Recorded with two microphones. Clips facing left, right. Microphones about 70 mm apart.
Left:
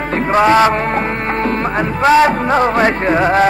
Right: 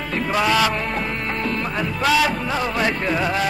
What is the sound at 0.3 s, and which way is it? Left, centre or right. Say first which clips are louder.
Music: left 9 dB; left.